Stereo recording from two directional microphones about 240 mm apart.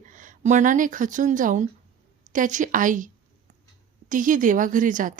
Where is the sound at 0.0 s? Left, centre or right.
Right.